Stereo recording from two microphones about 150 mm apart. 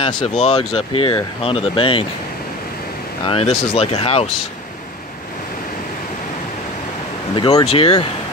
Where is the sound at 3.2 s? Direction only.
45° left (ahead or behind).